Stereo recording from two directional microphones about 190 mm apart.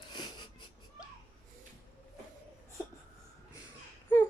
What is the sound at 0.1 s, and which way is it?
Wheeze, 20° left (ahead or behind).